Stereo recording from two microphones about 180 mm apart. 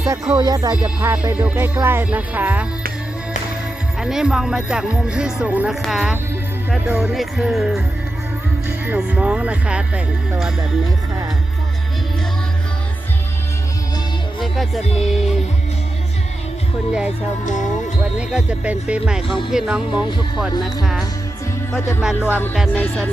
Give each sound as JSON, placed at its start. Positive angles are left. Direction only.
{"t": 0.0, "sound": "music", "side_deg": -15}
{"t": 0.8, "sound": "speech", "side_deg": -10}
{"t": 4.0, "sound": "speech", "side_deg": -5}
{"t": 8.8, "sound": "speech", "side_deg": -10}
{"t": 14.4, "sound": "music", "side_deg": 0}
{"t": 14.9, "sound": "speech", "side_deg": 0}
{"t": 17.4, "sound": "music", "side_deg": 45}
{"t": 18.2, "sound": "speech", "side_deg": -5}
{"t": 21.7, "sound": "speech", "side_deg": 15}
{"t": 22.0, "sound": "speech", "side_deg": -5}
{"t": 22.7, "sound": "speech", "side_deg": 10}